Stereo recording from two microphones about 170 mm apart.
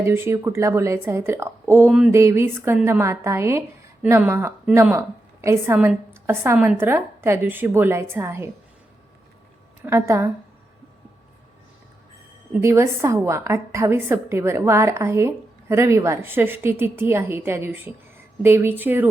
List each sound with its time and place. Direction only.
0.0 s a woman's voice: 15° right (ahead or behind)
9.8 s a woman's voice: 15° right (ahead or behind)
12.5 s a woman's voice: 15° right (ahead or behind)